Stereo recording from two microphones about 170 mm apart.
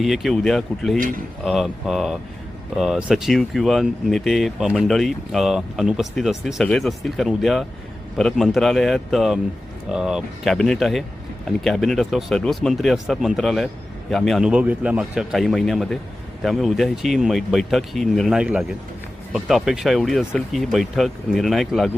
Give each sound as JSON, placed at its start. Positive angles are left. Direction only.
{"t": 0.0, "sound": "speech", "side_deg": 0}
{"t": 0.9, "sound": "speech", "side_deg": -55}
{"t": 1.5, "sound": "speech", "side_deg": 0}